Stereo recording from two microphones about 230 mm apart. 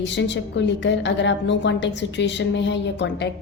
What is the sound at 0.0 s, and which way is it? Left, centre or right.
A woman's voice, left.